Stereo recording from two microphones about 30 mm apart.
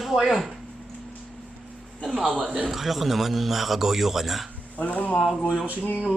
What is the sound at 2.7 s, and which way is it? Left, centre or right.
A man's voice, centre.